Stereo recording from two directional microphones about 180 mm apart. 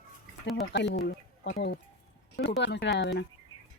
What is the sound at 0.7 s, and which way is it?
Speech, 70° left (ahead or behind).